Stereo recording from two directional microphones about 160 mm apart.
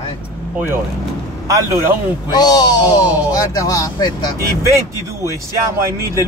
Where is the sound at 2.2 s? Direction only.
25° left (ahead or behind).